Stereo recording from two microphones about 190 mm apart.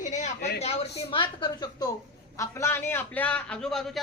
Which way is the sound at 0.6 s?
30° left (ahead or behind).